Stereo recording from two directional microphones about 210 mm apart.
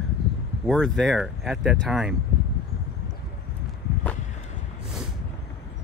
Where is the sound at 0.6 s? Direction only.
Centre (ahead or behind).